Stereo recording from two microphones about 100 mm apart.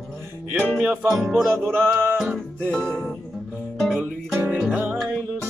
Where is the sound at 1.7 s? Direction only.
20° right (ahead or behind).